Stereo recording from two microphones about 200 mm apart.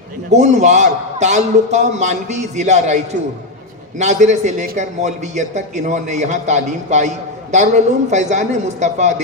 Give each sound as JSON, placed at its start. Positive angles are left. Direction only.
{"t": 0.3, "sound": "a man's voice", "side_deg": -35}